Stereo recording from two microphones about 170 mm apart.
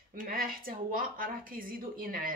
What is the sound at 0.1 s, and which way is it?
A woman's voice, 55° right (ahead or behind).